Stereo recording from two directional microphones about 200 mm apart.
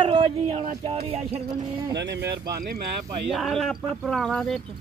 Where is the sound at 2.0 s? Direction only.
60° right (ahead or behind).